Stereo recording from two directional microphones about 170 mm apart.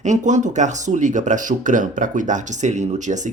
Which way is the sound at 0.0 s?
45° right (ahead or behind).